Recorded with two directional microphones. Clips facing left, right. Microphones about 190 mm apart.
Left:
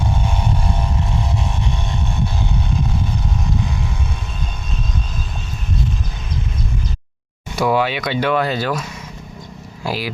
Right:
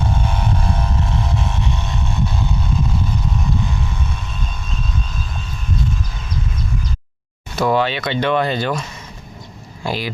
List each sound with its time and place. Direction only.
7.5 s speech: 10° left (ahead or behind)